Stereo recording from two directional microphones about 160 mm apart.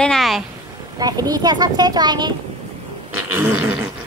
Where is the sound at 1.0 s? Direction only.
25° right (ahead or behind).